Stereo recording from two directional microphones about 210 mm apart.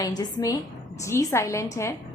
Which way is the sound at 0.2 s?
20° left (ahead or behind).